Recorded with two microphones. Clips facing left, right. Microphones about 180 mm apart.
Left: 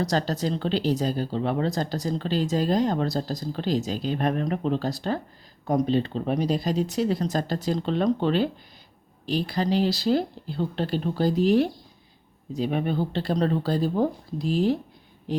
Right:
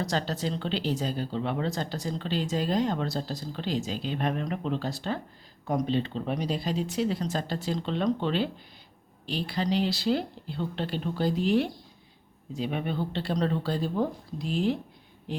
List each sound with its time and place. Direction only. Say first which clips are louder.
0.0 s speech: left 4 dB; 40° left (ahead or behind)